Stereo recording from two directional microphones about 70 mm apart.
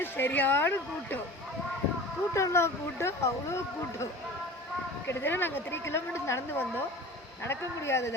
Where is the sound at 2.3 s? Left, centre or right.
Left.